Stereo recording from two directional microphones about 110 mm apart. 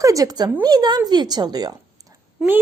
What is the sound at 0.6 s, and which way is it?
Speech, 40° right (ahead or behind).